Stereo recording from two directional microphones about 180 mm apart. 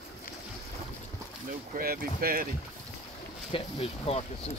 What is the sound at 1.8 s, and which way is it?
Speech, 55° right (ahead or behind).